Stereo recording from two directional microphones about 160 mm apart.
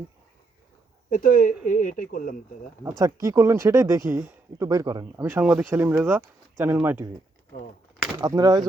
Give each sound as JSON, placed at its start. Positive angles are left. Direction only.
{"t": 1.1, "sound": "speech", "side_deg": 60}
{"t": 3.0, "sound": "speech", "side_deg": -20}
{"t": 8.2, "sound": "speech", "side_deg": -20}